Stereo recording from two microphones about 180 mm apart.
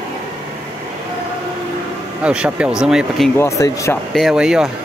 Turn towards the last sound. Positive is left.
turn(degrees=-5)  # may be behind; listen again after turning